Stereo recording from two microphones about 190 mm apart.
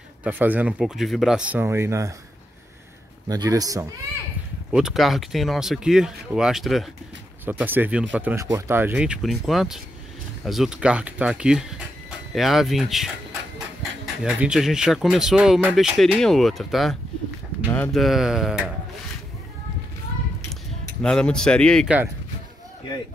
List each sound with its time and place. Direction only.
0.2 s speech: 10° right (ahead or behind)
3.3 s a man's voice: 20° right (ahead or behind)
4.7 s speech: centre (ahead or behind)
21.0 s speech: 5° left (ahead or behind)